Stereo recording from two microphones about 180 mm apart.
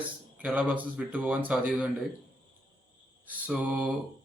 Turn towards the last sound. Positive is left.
turn(degrees=-5)  # may be behind; listen again after turning